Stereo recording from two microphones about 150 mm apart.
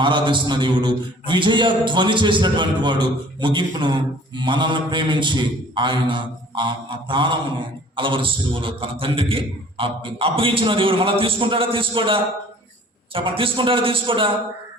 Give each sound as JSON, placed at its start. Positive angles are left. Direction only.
{"t": 0.0, "sound": "a man's voice", "side_deg": -30}